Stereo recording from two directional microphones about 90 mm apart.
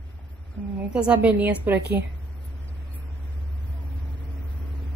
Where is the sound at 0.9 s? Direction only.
15° right (ahead or behind).